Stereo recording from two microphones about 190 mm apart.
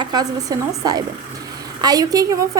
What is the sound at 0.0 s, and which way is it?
A woman's voice, 20° right (ahead or behind).